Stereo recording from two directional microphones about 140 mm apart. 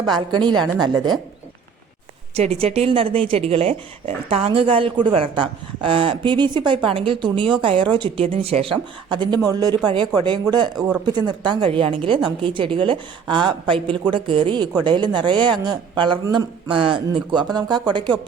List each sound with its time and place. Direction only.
0.3 s a woman's voice: 30° right (ahead or behind)
2.3 s speech: 45° right (ahead or behind)
10.8 s speech: 5° right (ahead or behind)
11.0 s a woman's voice: 35° right (ahead or behind)
16.6 s speech: 40° right (ahead or behind)